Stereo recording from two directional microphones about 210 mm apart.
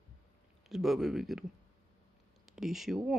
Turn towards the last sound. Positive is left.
turn(degrees=0)  # may be behind; listen again after turning